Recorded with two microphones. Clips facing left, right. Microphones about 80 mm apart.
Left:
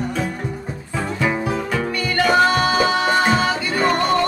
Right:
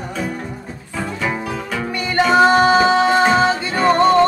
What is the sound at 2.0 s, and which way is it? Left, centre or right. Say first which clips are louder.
Music: right 3 dB; right.